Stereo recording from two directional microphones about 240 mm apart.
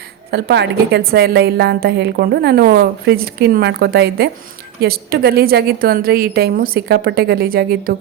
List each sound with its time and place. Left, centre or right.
0.3 s a woman's voice: right